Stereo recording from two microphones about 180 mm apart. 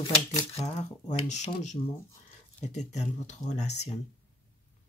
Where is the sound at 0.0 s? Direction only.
20° left (ahead or behind).